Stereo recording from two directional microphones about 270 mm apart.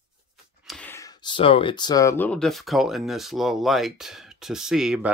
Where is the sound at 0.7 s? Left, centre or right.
Centre.